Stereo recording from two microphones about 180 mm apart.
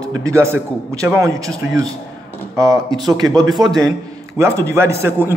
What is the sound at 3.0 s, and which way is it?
A man's voice, 20° right (ahead or behind).